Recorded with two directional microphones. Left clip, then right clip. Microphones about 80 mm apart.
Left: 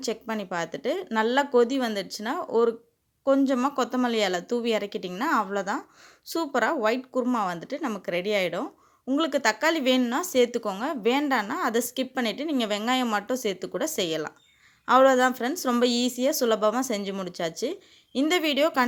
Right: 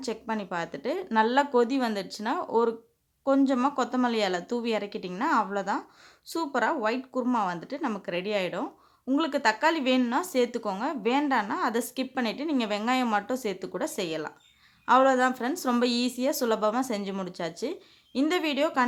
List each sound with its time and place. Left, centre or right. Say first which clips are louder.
0.0 s speech: left 2 dB; left